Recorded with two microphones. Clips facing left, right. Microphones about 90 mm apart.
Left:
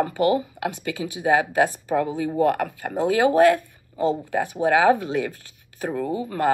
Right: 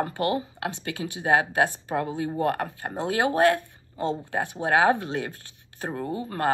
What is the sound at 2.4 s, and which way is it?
Speech, 30° right (ahead or behind).